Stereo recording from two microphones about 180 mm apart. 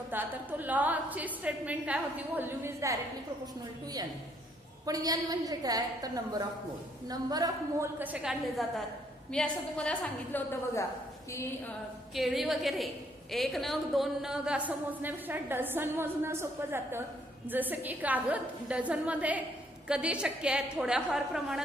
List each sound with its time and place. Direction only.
0.1 s a woman's voice: 10° right (ahead or behind); by 11.7 s 15° left (ahead or behind)
12.1 s a woman's voice: centre (ahead or behind)